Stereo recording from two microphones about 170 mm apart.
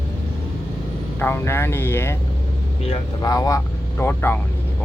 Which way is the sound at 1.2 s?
15° left (ahead or behind).